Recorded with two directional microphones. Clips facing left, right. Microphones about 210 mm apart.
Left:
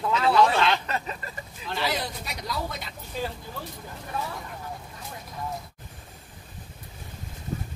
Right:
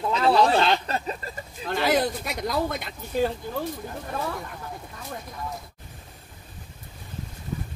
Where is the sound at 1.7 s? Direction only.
50° right (ahead or behind).